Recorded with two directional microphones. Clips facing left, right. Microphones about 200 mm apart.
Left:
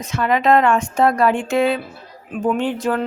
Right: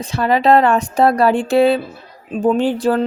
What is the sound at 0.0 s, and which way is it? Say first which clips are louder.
Speech: right 3 dB; 35° right (ahead or behind).